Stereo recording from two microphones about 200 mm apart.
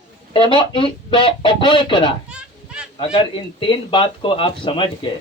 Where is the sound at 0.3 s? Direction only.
25° left (ahead or behind).